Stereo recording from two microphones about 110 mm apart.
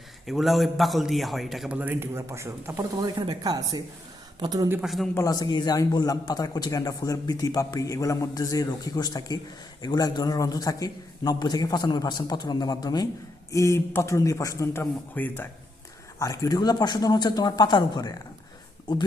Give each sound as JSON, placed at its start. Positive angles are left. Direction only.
{"t": 0.3, "sound": "a man's voice", "side_deg": 0}
{"t": 1.8, "sound": "speech", "side_deg": -20}
{"t": 3.0, "sound": "speech", "side_deg": -40}
{"t": 4.8, "sound": "a man's voice", "side_deg": 0}
{"t": 5.1, "sound": "a man's voice", "side_deg": 30}
{"t": 16.1, "sound": "a man's voice", "side_deg": 30}